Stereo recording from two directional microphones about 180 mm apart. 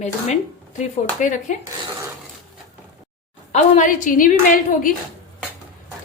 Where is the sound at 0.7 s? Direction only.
45° left (ahead or behind).